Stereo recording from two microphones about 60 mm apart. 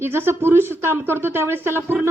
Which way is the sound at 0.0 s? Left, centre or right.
Right.